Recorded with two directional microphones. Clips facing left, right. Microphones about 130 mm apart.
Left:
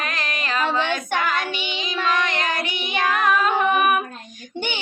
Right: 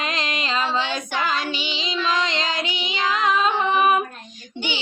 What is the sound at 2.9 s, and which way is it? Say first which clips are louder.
Child singing: left 2 dB; 60° left (ahead or behind).